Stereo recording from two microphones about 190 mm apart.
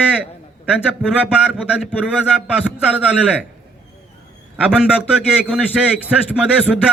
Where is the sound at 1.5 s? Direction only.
5° right (ahead or behind).